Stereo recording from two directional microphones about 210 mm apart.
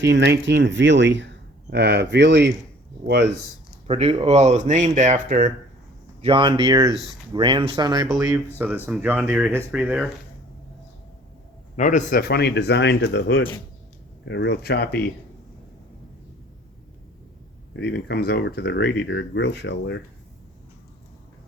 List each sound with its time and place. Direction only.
0.0 s speech: 55° right (ahead or behind)
3.8 s speech: 30° right (ahead or behind)
6.2 s speech: 25° right (ahead or behind)
8.0 s speech: centre (ahead or behind)
11.8 s speech: 35° left (ahead or behind)
17.7 s speech: 55° left (ahead or behind)